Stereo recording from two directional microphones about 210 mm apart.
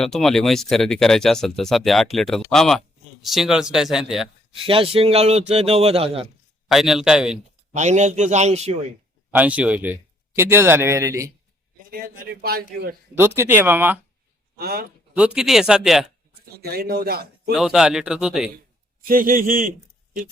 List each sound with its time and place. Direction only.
0.0 s speech: centre (ahead or behind)
4.5 s speech: 25° right (ahead or behind)
6.7 s speech: centre (ahead or behind)
7.7 s a man's voice: 35° right (ahead or behind)
9.3 s speech: 5° right (ahead or behind)
11.9 s a man's voice: 45° right (ahead or behind)
13.1 s speech: 10° right (ahead or behind)
14.5 s speech: 50° right (ahead or behind)
15.1 s speech: 5° right (ahead or behind)
16.6 s a man's voice: 45° right (ahead or behind)
17.5 s speech: centre (ahead or behind)
19.0 s a man's voice: 40° right (ahead or behind)